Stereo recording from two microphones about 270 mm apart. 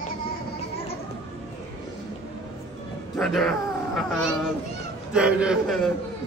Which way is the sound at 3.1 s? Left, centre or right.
Centre.